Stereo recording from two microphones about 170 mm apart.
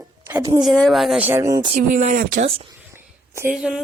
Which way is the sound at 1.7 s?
45° right (ahead or behind).